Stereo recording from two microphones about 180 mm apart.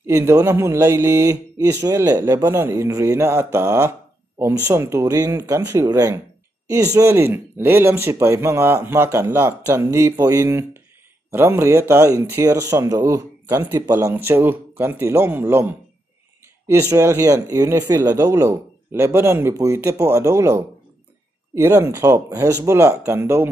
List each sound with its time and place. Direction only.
0.0 s speech: 15° right (ahead or behind)